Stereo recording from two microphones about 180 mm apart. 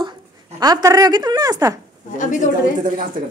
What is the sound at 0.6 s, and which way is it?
A woman's voice, 20° right (ahead or behind).